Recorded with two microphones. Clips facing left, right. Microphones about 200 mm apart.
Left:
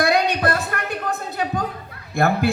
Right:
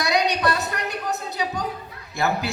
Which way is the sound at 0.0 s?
55° left (ahead or behind).